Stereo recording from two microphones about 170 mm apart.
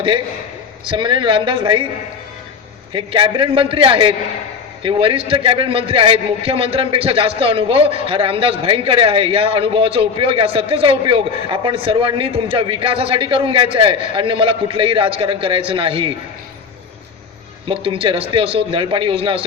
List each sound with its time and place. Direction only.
0.9 s speech: 30° right (ahead or behind)
2.9 s a man's voice: 30° right (ahead or behind)
17.7 s a man's voice: 35° right (ahead or behind)